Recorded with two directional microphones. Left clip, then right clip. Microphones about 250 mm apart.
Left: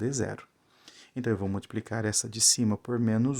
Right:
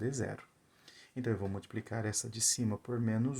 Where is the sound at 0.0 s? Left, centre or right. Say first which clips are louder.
Left 6 dB; left.